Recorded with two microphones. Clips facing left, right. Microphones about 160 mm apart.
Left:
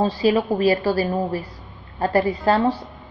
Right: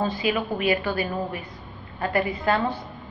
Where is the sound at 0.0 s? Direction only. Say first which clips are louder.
Left 6 dB; 35° left (ahead or behind).